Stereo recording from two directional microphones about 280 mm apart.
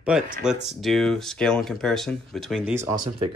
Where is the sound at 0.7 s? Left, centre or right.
Centre.